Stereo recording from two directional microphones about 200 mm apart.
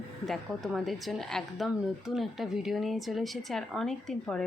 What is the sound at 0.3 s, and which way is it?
A woman's voice, centre (ahead or behind).